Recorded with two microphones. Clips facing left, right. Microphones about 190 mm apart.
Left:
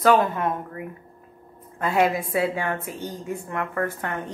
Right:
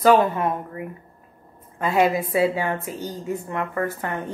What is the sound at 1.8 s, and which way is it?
A woman's voice, 5° right (ahead or behind).